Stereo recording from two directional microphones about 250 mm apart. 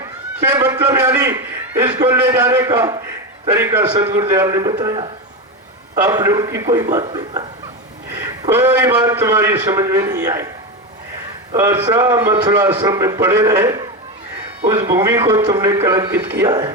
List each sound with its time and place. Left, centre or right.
0.5 s a man's voice: centre
1.8 s a man's voice: right
2.0 s a man's voice: centre
6.1 s a man's voice: centre
8.4 s a man's voice: centre
11.5 s a man's voice: centre